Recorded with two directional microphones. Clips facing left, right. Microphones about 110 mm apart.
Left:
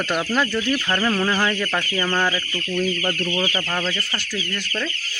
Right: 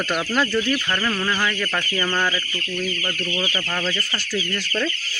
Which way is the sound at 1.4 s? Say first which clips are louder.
Left 2 dB; 25° left (ahead or behind).